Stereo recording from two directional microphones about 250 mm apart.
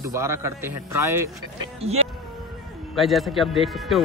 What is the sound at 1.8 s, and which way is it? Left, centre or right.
Music, right.